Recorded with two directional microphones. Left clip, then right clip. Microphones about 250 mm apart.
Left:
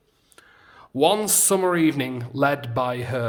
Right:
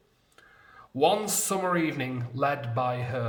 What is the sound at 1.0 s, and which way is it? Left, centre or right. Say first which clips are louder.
Speech: left 5 dB; left.